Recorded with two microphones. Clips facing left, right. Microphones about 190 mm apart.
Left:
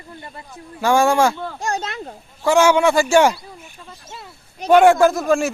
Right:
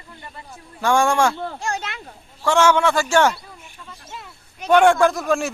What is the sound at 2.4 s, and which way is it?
Speech, 10° left (ahead or behind).